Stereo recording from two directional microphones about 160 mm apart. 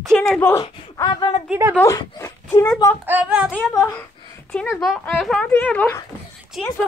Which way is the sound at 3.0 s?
10° right (ahead or behind).